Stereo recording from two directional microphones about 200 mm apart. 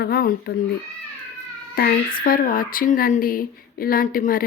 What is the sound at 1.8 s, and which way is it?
Speech, 45° left (ahead or behind).